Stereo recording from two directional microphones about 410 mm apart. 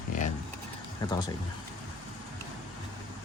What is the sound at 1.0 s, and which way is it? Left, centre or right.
Speech, centre.